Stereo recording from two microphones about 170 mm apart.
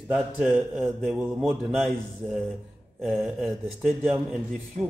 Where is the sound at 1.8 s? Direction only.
Centre (ahead or behind).